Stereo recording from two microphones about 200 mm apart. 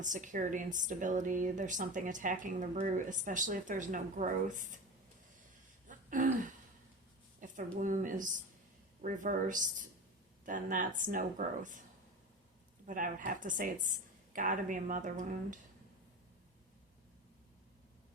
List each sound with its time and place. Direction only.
0.0 s speech: 40° right (ahead or behind)
5.9 s throat clearing: 40° right (ahead or behind)
7.3 s speech: 40° right (ahead or behind)
12.8 s speech: 40° right (ahead or behind)